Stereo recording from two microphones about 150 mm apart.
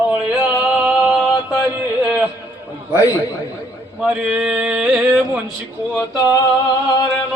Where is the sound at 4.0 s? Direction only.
5° right (ahead or behind).